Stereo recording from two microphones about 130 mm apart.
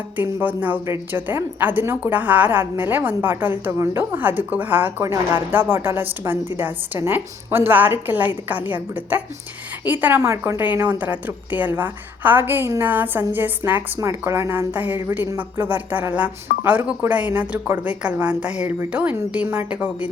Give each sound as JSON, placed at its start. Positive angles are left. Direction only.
{"t": 0.2, "sound": "a woman's voice", "side_deg": -15}